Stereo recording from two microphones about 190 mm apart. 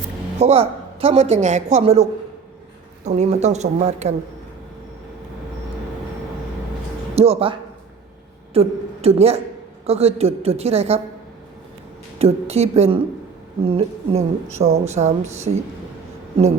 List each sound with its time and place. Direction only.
0.3 s a woman's voice: 35° right (ahead or behind)
7.2 s a woman's voice: 30° right (ahead or behind)
8.5 s a woman's voice: 30° right (ahead or behind)
12.2 s a woman's voice: 35° right (ahead or behind)